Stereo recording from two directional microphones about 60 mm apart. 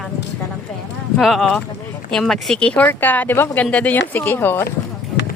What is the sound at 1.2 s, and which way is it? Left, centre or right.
Speech, centre.